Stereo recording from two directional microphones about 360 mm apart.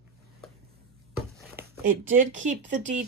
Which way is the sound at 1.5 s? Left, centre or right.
Right.